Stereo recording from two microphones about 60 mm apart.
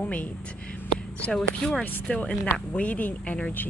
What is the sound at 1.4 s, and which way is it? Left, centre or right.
Speech, centre.